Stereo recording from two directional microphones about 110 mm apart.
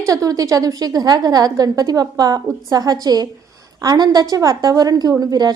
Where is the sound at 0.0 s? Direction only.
30° right (ahead or behind).